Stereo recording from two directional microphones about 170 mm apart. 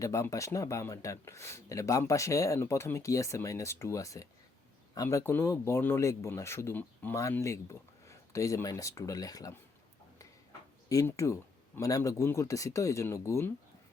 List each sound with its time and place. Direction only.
0.0 s speech: 20° left (ahead or behind)
10.8 s speech: 20° left (ahead or behind)